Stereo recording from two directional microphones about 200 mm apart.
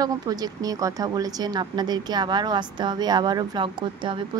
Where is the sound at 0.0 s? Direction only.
20° right (ahead or behind).